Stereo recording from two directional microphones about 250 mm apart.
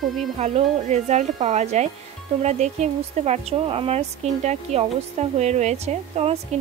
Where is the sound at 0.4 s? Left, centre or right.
Right.